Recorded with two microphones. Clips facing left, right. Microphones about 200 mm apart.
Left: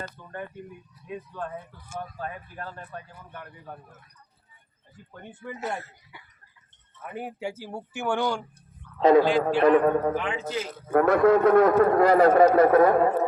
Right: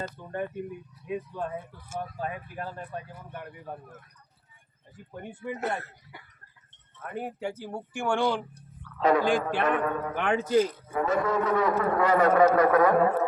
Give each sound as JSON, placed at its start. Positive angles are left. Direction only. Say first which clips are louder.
{"t": 0.0, "sound": "speech", "louder": "right 4 dB", "side_deg": -25}
{"t": 1.1, "sound": "speech", "louder": "right 3 dB", "side_deg": -10}
{"t": 5.1, "sound": "speech", "louder": "right 4 dB", "side_deg": -10}
{"t": 7.0, "sound": "speech", "louder": "even", "side_deg": 5}
{"t": 9.0, "sound": "speech", "louder": "left 6 dB", "side_deg": 25}
{"t": 9.2, "sound": "a man's voice", "louder": "left 3 dB", "side_deg": -50}
{"t": 9.6, "sound": "a man's voice", "louder": "left 8 dB", "side_deg": 35}
{"t": 10.2, "sound": "speech", "louder": "right 2 dB", "side_deg": -60}
{"t": 10.8, "sound": "a man's voice", "louder": "left 8 dB", "side_deg": 60}